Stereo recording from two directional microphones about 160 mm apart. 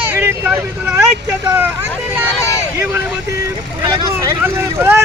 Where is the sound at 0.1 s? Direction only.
15° right (ahead or behind).